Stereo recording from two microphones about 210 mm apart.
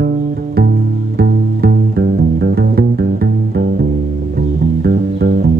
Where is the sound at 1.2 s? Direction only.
45° right (ahead or behind).